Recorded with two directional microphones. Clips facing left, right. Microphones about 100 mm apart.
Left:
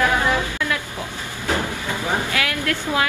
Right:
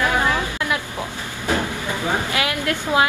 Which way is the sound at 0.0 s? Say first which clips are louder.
Left 1 dB; 20° right (ahead or behind).